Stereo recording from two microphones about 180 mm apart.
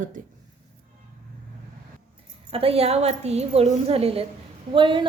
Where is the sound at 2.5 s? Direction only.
30° right (ahead or behind).